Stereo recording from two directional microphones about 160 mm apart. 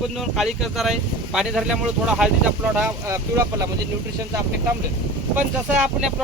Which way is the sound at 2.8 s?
15° right (ahead or behind).